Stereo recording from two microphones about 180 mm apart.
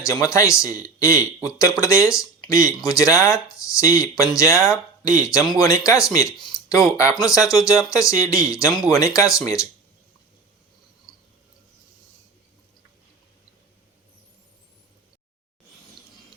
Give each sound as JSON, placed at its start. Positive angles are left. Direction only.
{"t": 0.0, "sound": "speech", "side_deg": 15}
{"t": 11.1, "sound": "cricket", "side_deg": 20}